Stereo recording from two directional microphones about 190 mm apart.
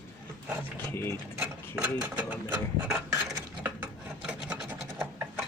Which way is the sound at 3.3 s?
10° right (ahead or behind).